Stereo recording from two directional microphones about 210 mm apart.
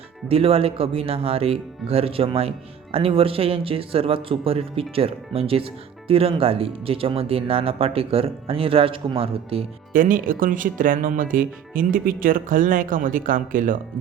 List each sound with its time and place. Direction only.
0.3 s speech: 25° right (ahead or behind)
9.9 s speech: 40° right (ahead or behind)